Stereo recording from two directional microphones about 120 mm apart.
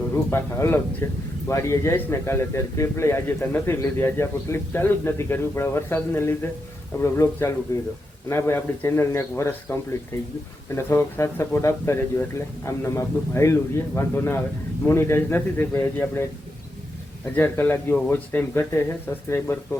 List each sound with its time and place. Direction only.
0.1 s speech: 20° left (ahead or behind)
10.8 s speech: 20° left (ahead or behind)
17.3 s speech: 15° left (ahead or behind)